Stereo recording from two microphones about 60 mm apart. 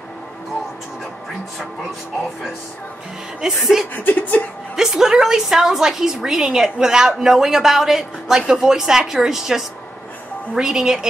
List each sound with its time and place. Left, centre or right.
3.3 s a woman's voice: centre
3.9 s a sound: left
4.7 s a woman's voice: centre